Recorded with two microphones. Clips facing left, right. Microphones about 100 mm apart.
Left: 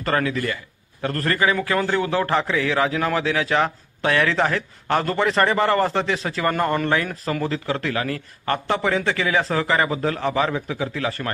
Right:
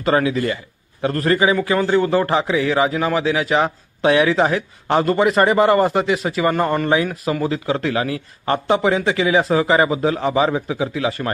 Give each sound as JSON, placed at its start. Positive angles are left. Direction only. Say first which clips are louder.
{"t": 0.0, "sound": "a man's voice", "louder": "right 5 dB", "side_deg": -15}
{"t": 2.2, "sound": "a man's voice", "louder": "right 3 dB", "side_deg": -15}